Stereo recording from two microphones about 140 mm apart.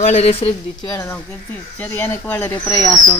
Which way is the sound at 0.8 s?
25° left (ahead or behind).